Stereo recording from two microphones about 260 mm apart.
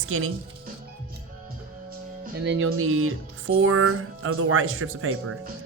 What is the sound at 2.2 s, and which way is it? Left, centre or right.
Music, right.